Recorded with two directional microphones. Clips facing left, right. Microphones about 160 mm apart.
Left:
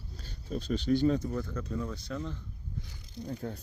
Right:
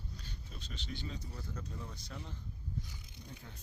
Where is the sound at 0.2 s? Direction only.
40° left (ahead or behind).